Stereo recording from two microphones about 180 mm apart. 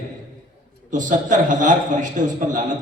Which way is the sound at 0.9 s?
45° right (ahead or behind).